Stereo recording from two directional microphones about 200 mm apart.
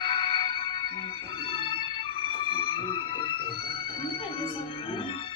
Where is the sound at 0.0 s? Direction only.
25° left (ahead or behind).